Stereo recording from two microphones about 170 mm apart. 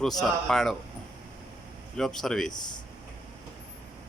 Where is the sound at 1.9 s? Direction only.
5° left (ahead or behind).